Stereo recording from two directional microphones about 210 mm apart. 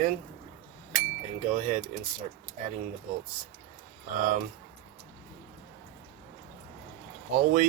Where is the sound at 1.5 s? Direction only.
35° right (ahead or behind).